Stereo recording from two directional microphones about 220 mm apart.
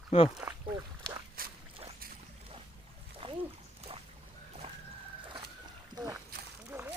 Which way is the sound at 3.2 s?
25° right (ahead or behind).